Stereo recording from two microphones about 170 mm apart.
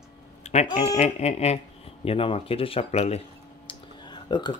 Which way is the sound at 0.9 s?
40° left (ahead or behind).